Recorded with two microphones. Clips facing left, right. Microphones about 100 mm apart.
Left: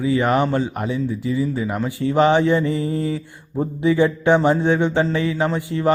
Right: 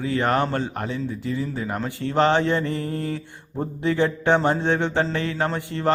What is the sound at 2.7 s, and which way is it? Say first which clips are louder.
Mantra: left 5 dB; 60° right (ahead or behind).